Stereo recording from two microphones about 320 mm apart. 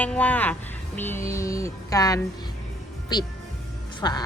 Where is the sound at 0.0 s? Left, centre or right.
Centre.